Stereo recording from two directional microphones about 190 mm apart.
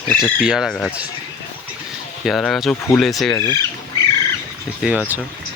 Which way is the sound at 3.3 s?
15° left (ahead or behind).